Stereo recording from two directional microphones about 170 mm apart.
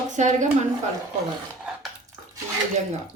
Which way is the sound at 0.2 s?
45° right (ahead or behind).